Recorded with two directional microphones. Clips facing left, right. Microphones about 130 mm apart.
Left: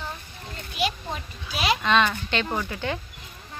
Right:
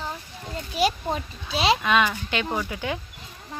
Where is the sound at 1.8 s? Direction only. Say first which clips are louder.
Even; 10° right (ahead or behind).